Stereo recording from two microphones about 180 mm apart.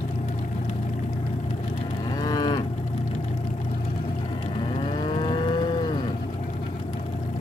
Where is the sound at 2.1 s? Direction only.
20° left (ahead or behind).